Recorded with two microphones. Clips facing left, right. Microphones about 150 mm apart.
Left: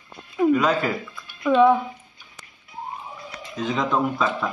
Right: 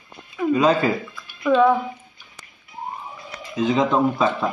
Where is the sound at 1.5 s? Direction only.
10° left (ahead or behind).